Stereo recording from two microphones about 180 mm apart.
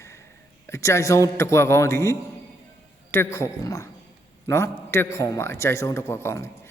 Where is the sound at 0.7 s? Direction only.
15° left (ahead or behind).